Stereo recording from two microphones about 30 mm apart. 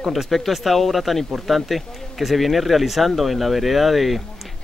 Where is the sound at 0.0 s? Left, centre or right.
Centre.